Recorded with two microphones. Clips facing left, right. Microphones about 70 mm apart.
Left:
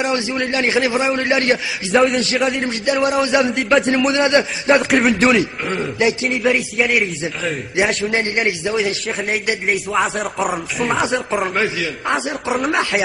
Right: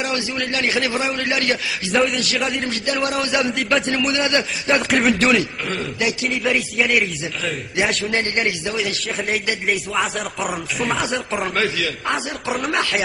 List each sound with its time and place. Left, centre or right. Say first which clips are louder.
0.0 s a man's voice: left 4 dB; left
3.5 s a man's voice: left 4 dB; centre
4.1 s a man's voice: left 5 dB; left
4.7 s a man's voice: left 1 dB; centre
5.4 s a man's voice: left 4 dB; left
6.2 s a man's voice: left 3 dB; centre
8.1 s a man's voice: left 2 dB; centre
9.7 s a man's voice: left 3 dB; centre
11.5 s a man's voice: left 2 dB; centre